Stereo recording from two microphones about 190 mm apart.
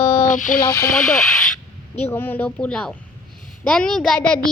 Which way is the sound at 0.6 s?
20° left (ahead or behind).